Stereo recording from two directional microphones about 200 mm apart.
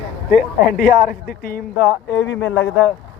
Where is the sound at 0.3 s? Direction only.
45° left (ahead or behind).